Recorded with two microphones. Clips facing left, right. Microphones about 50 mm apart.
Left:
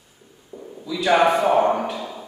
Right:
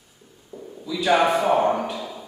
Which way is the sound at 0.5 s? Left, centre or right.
Centre.